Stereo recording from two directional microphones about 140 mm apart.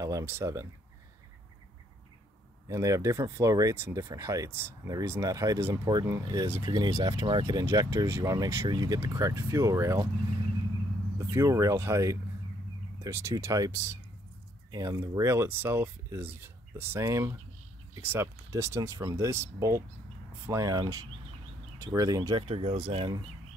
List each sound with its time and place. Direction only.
0.0 s speech: 20° right (ahead or behind)
2.7 s speech: 25° right (ahead or behind)
11.1 s speech: 20° right (ahead or behind)
22.5 s speech: 45° right (ahead or behind)